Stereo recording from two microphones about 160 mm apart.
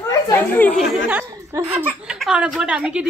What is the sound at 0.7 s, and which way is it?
Speech, 5° right (ahead or behind).